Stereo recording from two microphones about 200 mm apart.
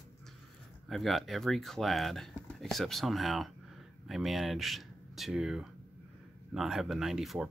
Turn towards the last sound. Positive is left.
turn(degrees=0)  # may be behind; listen again after turning